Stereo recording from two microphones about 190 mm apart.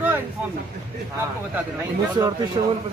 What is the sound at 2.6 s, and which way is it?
Speech, 30° right (ahead or behind).